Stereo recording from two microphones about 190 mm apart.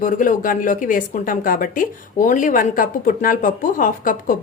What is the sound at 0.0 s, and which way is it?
Speech, 45° left (ahead or behind).